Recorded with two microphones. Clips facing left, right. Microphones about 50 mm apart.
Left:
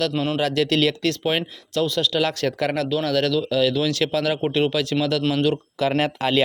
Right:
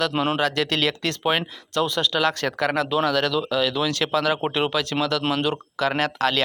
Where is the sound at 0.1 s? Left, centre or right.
Right.